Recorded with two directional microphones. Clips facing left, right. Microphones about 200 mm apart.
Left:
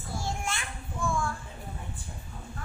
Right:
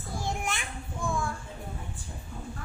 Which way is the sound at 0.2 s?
15° right (ahead or behind).